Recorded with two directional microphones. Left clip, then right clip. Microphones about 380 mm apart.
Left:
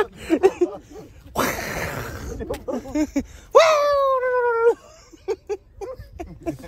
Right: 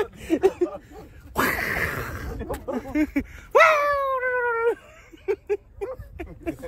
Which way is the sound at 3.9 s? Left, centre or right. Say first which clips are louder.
Left 4 dB; centre.